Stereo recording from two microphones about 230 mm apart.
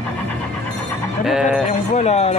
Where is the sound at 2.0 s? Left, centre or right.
Left.